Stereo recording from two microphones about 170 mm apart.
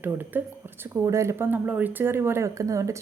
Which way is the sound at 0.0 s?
10° right (ahead or behind).